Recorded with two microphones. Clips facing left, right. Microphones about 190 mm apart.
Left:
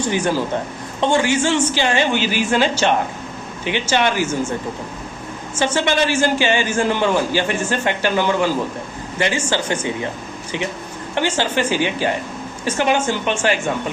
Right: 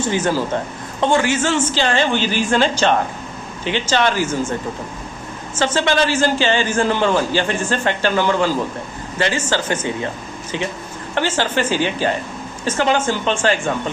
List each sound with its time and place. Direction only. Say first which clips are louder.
0.0 s a man's voice: even; 15° left (ahead or behind)
5.5 s a man's voice: right 1 dB; 10° left (ahead or behind)
11.1 s a man's voice: even; 15° left (ahead or behind)